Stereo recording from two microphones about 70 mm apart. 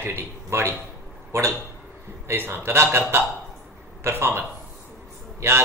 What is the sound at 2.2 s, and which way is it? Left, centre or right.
Speech, right.